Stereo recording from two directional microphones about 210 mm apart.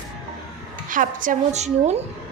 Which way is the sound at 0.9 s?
40° right (ahead or behind).